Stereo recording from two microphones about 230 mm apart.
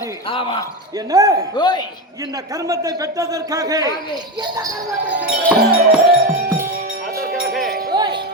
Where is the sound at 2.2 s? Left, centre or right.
Centre.